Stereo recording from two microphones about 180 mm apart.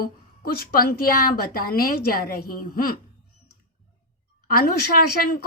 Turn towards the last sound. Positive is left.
turn(degrees=50)  # may be behind; listen again after turning